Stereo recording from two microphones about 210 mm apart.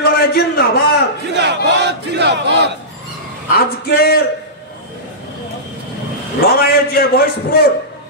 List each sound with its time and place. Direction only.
0.0 s a sound: 50° left (ahead or behind)
1.3 s battle cry: 55° right (ahead or behind)
3.5 s a man's voice: 45° left (ahead or behind)
6.4 s a man's voice: 45° left (ahead or behind)